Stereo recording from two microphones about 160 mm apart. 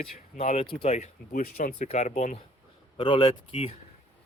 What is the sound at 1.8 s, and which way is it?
Speech, 40° left (ahead or behind).